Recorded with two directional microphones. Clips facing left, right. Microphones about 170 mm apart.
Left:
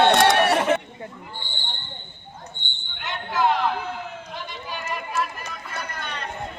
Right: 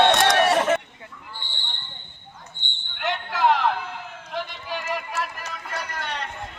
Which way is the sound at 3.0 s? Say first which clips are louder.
Right 1 dB; 75° right (ahead or behind).